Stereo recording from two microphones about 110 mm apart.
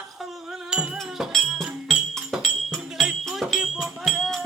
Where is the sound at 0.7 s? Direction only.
5° right (ahead or behind).